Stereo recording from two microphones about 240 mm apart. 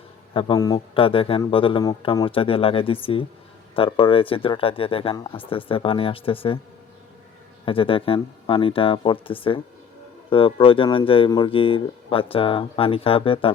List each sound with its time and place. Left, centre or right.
0.3 s speech: centre
7.6 s speech: left